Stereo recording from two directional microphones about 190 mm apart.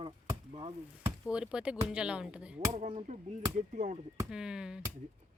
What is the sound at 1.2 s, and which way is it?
A woman's voice, 5° right (ahead or behind).